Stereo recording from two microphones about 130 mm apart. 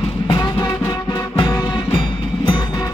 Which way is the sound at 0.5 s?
35° left (ahead or behind).